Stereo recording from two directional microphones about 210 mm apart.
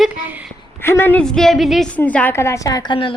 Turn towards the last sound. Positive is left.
turn(degrees=25)  # may be behind; listen again after turning